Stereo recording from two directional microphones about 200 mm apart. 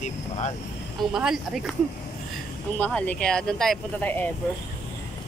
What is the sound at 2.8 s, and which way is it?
Speech, 5° left (ahead or behind).